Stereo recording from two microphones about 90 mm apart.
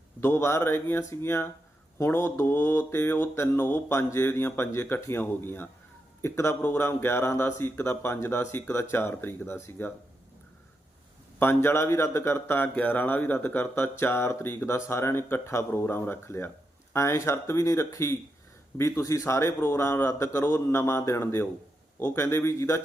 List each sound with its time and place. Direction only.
0.2 s a man's voice: 30° left (ahead or behind)
11.3 s a man's voice: 25° left (ahead or behind)